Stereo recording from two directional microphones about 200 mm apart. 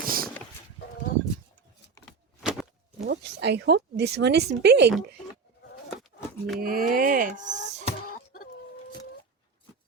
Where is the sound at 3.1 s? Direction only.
55° right (ahead or behind).